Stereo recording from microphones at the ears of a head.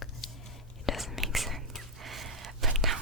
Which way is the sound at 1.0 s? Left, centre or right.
Centre.